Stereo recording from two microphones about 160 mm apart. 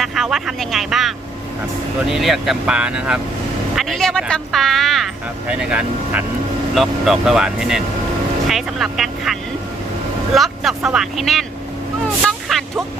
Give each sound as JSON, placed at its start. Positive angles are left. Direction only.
{"t": 0.0, "sound": "speech", "side_deg": 0}
{"t": 12.5, "sound": "speech", "side_deg": 0}